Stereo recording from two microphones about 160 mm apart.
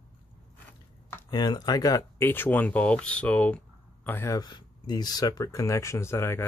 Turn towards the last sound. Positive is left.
turn(degrees=15)  # may be behind; listen again after turning